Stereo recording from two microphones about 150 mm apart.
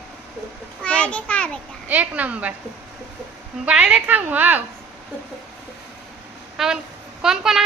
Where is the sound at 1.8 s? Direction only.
10° right (ahead or behind).